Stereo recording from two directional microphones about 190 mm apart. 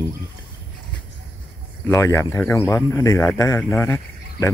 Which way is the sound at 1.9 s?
15° left (ahead or behind).